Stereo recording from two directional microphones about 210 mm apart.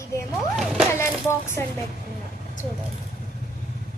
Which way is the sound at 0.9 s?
10° left (ahead or behind).